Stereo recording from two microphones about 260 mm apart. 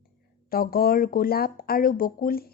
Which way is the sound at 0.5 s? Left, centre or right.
Left.